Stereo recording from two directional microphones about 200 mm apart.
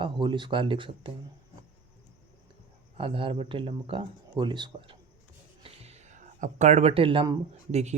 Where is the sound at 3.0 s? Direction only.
25° right (ahead or behind).